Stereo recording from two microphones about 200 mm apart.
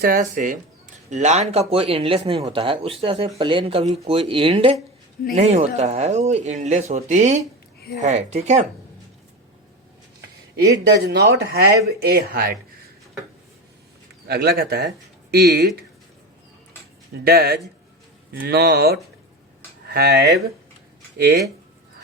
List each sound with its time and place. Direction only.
0.0 s speech: 45° right (ahead or behind)
10.6 s speech: 55° right (ahead or behind)
14.3 s speech: 50° right (ahead or behind)
17.2 s speech: 50° right (ahead or behind)